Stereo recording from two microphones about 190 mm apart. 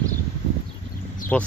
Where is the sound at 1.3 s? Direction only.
5° left (ahead or behind).